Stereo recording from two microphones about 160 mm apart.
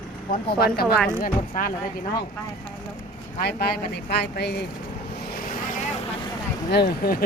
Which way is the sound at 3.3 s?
80° left.